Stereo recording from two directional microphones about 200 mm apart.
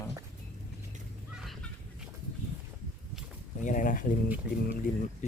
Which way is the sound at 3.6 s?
40° left (ahead or behind).